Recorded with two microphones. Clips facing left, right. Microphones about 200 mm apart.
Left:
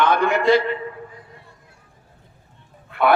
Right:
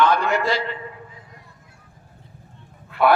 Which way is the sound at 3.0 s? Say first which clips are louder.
Right 1 dB; 55° left (ahead or behind).